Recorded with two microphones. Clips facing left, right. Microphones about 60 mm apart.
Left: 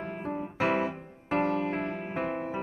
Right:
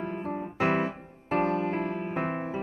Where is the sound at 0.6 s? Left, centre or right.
Right.